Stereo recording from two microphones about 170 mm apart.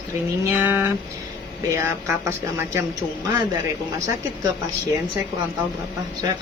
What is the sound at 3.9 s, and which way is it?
Speech, 20° right (ahead or behind).